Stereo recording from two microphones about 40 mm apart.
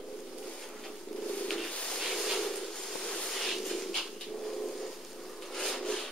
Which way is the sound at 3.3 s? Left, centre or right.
Centre.